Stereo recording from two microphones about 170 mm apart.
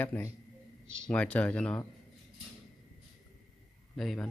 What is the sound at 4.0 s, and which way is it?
Speech, centre (ahead or behind).